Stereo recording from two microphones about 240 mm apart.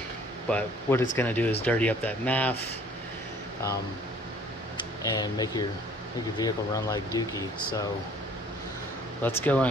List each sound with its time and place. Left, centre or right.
0.5 s speech: centre
5.1 s speech: centre
9.2 s speech: centre